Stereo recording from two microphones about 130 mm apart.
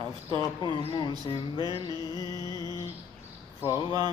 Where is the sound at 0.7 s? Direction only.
35° left (ahead or behind).